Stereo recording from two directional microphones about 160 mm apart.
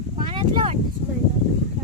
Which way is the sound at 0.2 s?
35° right (ahead or behind).